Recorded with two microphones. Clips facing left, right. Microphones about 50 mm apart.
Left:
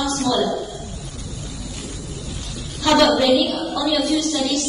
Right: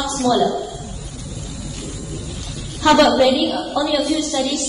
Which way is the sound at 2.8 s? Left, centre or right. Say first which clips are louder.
Right 3 dB; right.